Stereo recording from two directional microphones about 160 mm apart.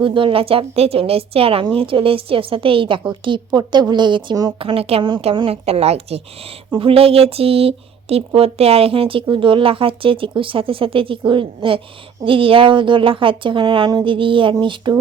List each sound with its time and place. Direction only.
0.0 s a woman's voice: 30° right (ahead or behind)